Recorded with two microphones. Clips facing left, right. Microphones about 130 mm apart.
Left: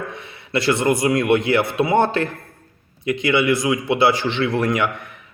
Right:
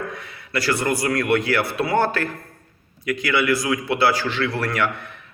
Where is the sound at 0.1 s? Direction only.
25° left (ahead or behind).